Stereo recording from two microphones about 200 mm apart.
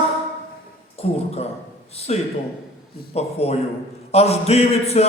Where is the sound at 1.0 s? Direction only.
30° left (ahead or behind).